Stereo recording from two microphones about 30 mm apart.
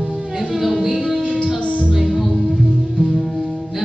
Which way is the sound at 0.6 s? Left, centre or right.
Centre.